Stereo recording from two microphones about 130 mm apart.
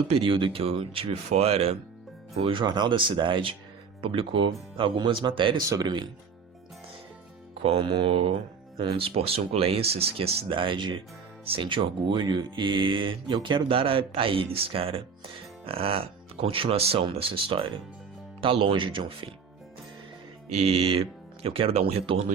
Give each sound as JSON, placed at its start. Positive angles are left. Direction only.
{"t": 0.1, "sound": "speech", "side_deg": -40}
{"t": 5.6, "sound": "speech", "side_deg": -30}
{"t": 7.6, "sound": "speech", "side_deg": -45}
{"t": 20.5, "sound": "speech", "side_deg": -55}